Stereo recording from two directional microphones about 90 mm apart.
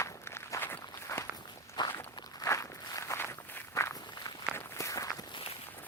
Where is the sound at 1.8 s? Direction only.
55° left (ahead or behind).